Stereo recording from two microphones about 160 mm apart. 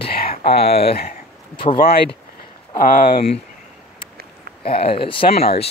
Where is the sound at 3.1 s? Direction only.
40° left (ahead or behind).